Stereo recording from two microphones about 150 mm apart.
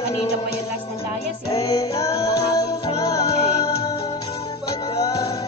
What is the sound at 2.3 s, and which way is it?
Music, 90° left.